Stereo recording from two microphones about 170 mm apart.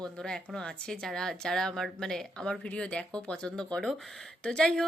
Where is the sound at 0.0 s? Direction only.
5° left (ahead or behind).